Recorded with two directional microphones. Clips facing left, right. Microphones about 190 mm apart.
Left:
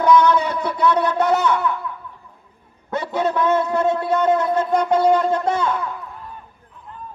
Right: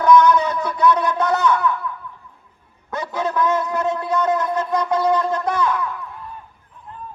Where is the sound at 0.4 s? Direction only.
30° left (ahead or behind).